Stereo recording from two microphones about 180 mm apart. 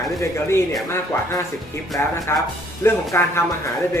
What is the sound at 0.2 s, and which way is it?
Speech, 15° left (ahead or behind).